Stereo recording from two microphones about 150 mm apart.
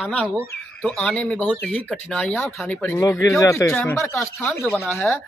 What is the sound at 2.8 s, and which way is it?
Speech, 15° left (ahead or behind).